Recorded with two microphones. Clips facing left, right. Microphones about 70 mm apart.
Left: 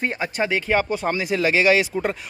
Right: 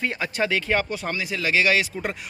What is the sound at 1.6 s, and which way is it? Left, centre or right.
Speech, centre.